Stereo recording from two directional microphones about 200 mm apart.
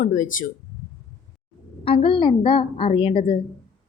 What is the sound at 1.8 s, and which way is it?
A woman's voice, 25° left (ahead or behind).